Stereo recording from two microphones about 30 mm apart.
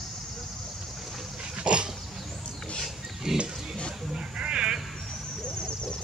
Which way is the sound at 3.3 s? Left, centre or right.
Centre.